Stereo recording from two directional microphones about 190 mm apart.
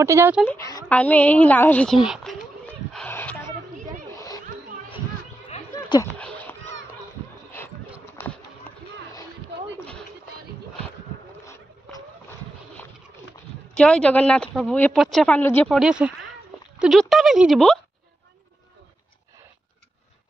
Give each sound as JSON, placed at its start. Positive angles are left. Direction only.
{"t": 0.0, "sound": "speech", "side_deg": -15}
{"t": 0.5, "sound": "a woman's voice", "side_deg": 15}
{"t": 2.9, "sound": "a sound", "side_deg": 10}
{"t": 6.1, "sound": "cat", "side_deg": 5}
{"t": 13.7, "sound": "speech", "side_deg": 5}